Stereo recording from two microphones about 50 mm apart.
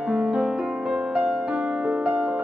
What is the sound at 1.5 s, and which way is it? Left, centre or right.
Music, right.